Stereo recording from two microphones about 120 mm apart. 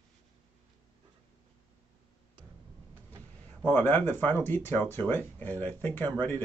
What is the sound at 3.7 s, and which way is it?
Speech, 15° left (ahead or behind).